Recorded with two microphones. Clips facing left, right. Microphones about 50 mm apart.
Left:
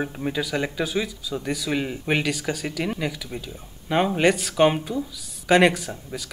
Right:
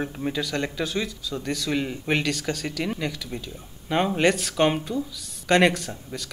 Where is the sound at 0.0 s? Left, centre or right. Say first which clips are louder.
Left 1 dB; centre.